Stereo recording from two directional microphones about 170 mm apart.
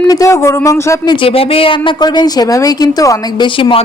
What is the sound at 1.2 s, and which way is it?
A woman's voice, 35° left (ahead or behind).